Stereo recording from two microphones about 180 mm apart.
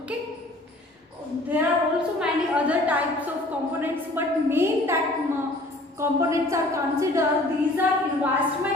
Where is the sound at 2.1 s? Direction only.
5° right (ahead or behind).